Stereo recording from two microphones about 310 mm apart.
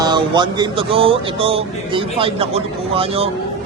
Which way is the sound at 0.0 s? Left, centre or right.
Centre.